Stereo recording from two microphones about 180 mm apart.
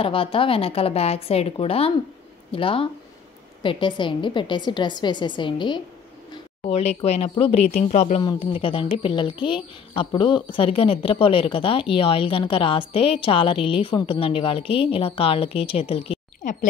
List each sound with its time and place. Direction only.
0.0 s a woman's voice: 30° left (ahead or behind)
6.6 s a woman's voice: 40° left (ahead or behind)
8.2 s a woman's voice: 25° left (ahead or behind)